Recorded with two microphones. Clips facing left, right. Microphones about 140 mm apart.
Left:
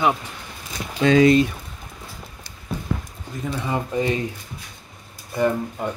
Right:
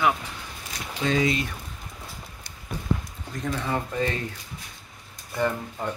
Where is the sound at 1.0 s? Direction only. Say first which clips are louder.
Left 9 dB; 90° left.